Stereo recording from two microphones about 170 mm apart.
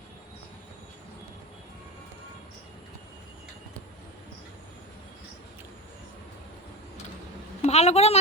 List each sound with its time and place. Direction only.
7.6 s a woman's voice: 40° left (ahead or behind)